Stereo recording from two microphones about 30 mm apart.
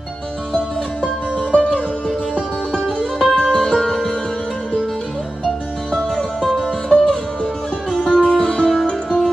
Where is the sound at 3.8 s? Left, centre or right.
Centre.